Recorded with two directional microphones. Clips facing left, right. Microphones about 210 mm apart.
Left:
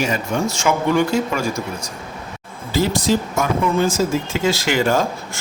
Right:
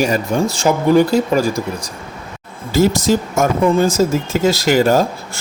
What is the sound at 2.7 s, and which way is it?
Speech, 45° right (ahead or behind).